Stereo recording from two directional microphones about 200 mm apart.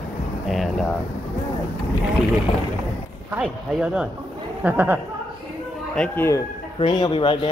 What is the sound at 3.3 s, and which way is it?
Speech, 5° right (ahead or behind).